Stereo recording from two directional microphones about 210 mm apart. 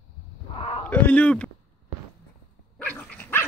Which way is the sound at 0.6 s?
25° left (ahead or behind).